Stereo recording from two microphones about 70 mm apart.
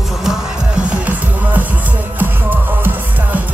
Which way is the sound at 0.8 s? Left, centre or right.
Right.